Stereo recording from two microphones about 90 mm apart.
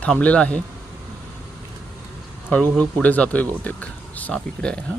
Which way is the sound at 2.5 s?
15° left (ahead or behind).